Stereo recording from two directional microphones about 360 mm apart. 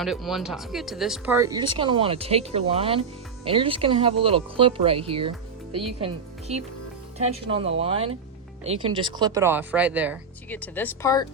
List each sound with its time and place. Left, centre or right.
0.0 s speech: centre
7.3 s speech: centre